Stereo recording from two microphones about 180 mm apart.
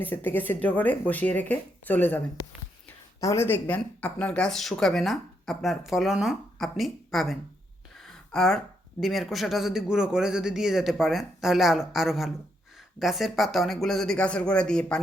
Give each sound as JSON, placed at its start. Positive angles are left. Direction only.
{"t": 0.0, "sound": "speech", "side_deg": 10}